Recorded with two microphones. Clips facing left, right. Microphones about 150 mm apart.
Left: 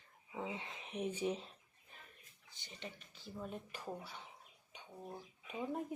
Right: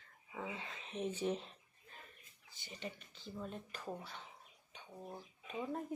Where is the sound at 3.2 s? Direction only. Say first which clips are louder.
Even; 10° left (ahead or behind).